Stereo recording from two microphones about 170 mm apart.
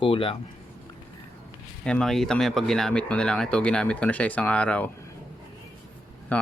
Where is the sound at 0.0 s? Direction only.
30° left (ahead or behind).